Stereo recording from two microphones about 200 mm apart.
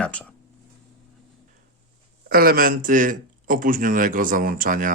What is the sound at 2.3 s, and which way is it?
Speech, 45° right (ahead or behind).